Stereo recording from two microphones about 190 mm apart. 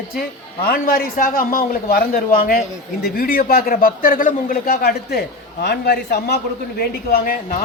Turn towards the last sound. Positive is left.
turn(degrees=55)  # may be behind; listen again after turning